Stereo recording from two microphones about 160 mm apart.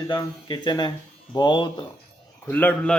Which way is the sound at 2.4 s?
10° left (ahead or behind).